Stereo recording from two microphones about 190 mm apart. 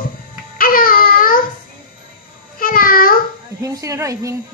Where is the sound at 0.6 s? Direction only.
50° left (ahead or behind).